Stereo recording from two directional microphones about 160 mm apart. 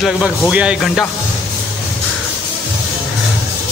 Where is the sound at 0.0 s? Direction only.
5° right (ahead or behind).